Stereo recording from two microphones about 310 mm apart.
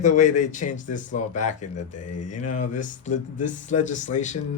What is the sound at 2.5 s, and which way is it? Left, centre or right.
A man's voice, left.